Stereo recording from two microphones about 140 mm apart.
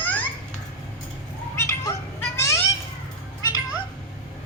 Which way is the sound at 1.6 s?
20° left (ahead or behind).